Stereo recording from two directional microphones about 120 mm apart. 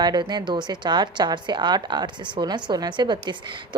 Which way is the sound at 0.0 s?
35° right (ahead or behind).